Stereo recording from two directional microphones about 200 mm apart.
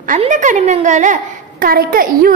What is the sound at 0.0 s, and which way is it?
A woman's voice, 40° right (ahead or behind).